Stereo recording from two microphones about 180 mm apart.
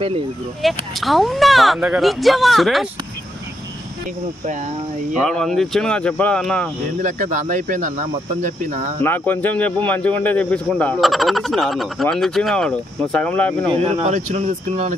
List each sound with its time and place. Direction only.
0.6 s speech: centre (ahead or behind)
5.2 s speech: centre (ahead or behind)
7.0 s speech: 45° right (ahead or behind)
9.0 s speech: 10° left (ahead or behind)
13.7 s speech: 30° right (ahead or behind)